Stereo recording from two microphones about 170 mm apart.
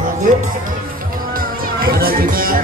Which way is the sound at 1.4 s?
60° right (ahead or behind).